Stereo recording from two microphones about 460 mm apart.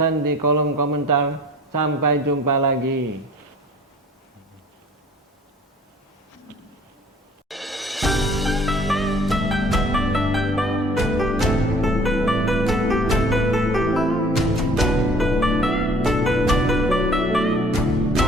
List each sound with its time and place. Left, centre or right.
0.0 s speech: right
7.4 s music: centre